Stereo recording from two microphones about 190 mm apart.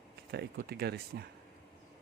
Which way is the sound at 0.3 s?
55° right (ahead or behind).